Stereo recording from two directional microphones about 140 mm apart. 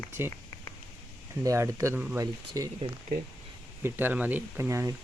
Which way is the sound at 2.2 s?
25° right (ahead or behind).